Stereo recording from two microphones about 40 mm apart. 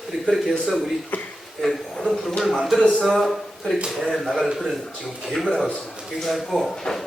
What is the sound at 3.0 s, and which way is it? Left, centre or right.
Speech, centre.